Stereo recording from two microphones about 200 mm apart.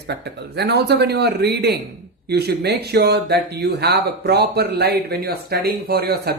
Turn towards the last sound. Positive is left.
turn(degrees=-50)  # may be behind; listen again after turning